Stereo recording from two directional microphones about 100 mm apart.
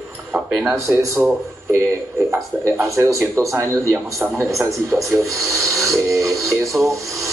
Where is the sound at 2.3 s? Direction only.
30° right (ahead or behind).